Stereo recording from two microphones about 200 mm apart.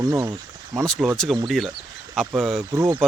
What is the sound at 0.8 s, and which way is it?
Speech, 5° left (ahead or behind).